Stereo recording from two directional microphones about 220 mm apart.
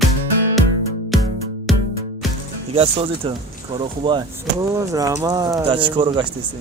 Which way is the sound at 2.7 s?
25° right (ahead or behind).